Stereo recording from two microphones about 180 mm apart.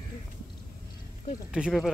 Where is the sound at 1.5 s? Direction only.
5° right (ahead or behind).